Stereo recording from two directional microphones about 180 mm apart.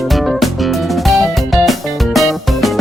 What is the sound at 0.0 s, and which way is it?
Music, centre (ahead or behind).